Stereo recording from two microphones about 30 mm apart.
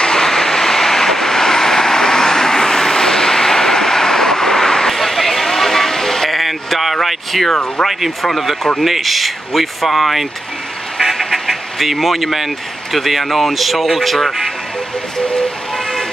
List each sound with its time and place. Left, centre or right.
0.2 s vehicle: centre
4.9 s sheep: centre
6.3 s a sound: centre
8.2 s speech: centre
11.1 s duck: centre
11.4 s speech: centre